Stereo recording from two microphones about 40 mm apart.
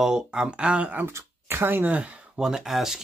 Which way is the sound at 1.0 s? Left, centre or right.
Right.